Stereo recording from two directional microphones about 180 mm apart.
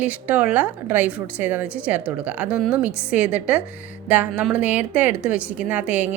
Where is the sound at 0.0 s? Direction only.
10° right (ahead or behind).